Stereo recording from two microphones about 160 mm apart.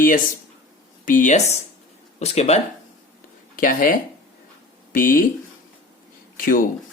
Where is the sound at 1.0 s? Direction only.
55° left (ahead or behind).